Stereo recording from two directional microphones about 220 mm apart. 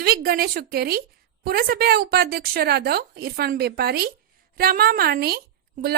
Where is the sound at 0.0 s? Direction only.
40° right (ahead or behind).